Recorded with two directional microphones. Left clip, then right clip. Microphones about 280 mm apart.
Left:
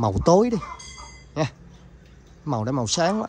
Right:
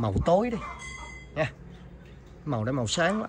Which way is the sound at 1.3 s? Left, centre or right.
Centre.